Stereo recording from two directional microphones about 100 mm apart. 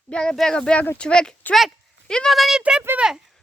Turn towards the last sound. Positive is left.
turn(degrees=-10)  # may be behind; listen again after turning